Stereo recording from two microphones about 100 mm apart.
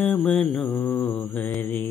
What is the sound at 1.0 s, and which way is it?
Mantra, 15° left (ahead or behind).